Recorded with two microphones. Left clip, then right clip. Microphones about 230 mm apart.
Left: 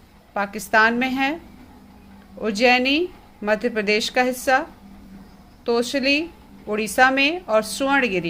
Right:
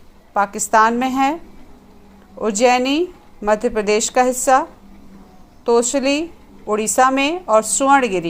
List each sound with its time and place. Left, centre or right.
0.3 s a woman's voice: centre
2.4 s a woman's voice: centre
5.6 s a woman's voice: centre